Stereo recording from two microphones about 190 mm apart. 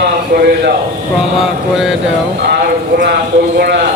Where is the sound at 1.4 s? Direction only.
5° right (ahead or behind).